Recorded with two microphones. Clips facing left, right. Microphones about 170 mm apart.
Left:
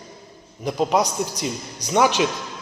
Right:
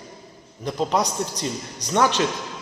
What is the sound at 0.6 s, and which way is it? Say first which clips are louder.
A man's voice: left 2 dB; 10° left (ahead or behind).